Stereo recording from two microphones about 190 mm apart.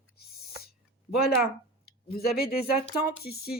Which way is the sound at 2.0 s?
55° left (ahead or behind).